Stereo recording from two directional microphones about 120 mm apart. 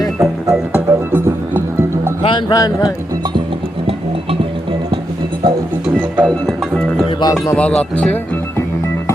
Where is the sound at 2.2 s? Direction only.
40° left (ahead or behind).